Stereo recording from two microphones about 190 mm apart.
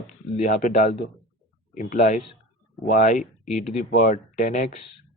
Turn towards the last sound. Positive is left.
turn(degrees=45)  # may be behind; listen again after turning